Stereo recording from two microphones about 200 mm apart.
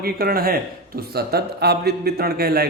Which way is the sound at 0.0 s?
50° right (ahead or behind).